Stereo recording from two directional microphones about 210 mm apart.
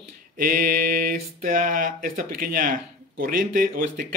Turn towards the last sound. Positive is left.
turn(degrees=-40)  # may be behind; listen again after turning